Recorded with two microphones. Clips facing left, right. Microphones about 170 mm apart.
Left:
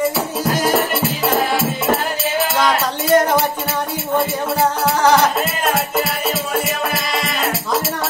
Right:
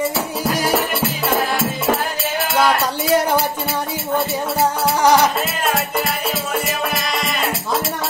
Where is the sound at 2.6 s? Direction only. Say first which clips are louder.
Right 4 dB; 5° right (ahead or behind).